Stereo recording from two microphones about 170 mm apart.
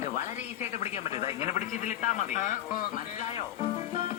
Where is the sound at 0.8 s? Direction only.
40° left (ahead or behind).